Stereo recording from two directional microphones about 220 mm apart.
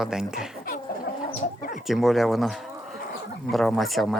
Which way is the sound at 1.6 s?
40° left (ahead or behind).